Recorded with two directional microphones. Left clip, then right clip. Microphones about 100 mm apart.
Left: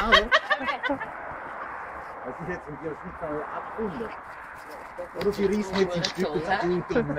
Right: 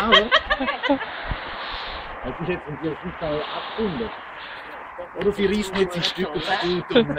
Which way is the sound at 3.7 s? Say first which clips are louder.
Right 5 dB; 10° left (ahead or behind).